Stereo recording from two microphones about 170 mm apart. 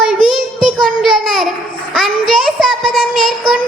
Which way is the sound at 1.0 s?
Centre (ahead or behind).